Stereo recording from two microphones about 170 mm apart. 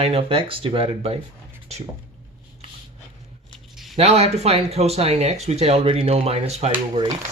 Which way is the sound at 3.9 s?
40° right (ahead or behind).